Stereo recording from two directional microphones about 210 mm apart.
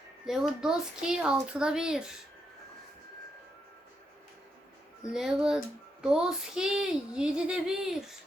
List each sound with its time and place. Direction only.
0.3 s speech: 5° right (ahead or behind)
5.1 s speech: 5° right (ahead or behind)